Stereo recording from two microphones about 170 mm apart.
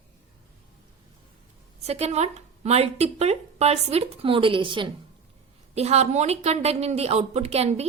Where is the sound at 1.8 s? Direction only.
40° right (ahead or behind).